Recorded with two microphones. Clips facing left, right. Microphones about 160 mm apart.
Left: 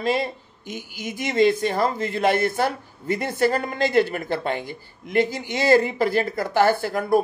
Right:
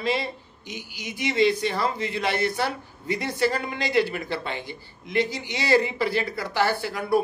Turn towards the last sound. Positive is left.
turn(degrees=45)  # may be behind; listen again after turning